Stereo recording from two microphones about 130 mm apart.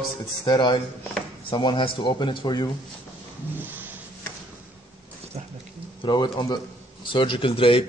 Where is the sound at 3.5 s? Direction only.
15° right (ahead or behind).